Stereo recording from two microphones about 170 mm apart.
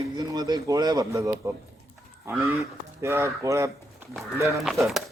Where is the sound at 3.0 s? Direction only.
15° right (ahead or behind).